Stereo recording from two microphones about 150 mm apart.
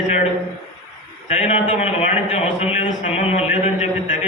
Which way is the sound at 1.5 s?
50° left (ahead or behind).